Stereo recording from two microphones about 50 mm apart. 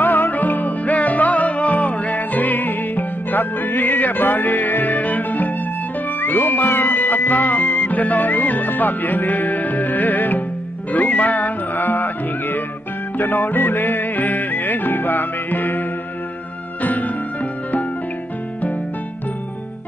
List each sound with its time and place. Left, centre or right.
0.0 s music: left
16.8 s music: left